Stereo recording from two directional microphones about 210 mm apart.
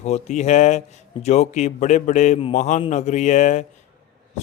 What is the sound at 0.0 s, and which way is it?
Speech, 30° left (ahead or behind).